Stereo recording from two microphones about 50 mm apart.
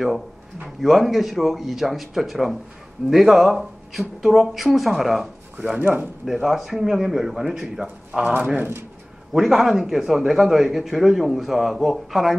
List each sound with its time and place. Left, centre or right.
0.7 s a man's voice: centre
5.8 s speech: right
6.2 s speech: centre
8.4 s speech: right
9.3 s a man's voice: centre